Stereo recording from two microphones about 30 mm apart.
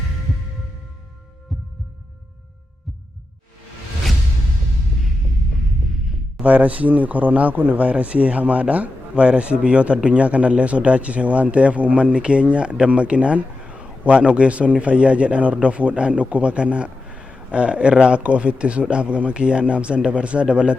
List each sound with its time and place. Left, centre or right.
6.4 s speech: right
12.0 s speech: right
12.9 s a sound: right
14.1 s a man's voice: right
18.2 s speech: right